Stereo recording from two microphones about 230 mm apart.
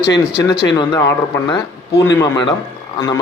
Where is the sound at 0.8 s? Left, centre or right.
Centre.